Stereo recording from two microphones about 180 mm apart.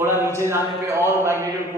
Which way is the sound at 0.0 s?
15° right (ahead or behind).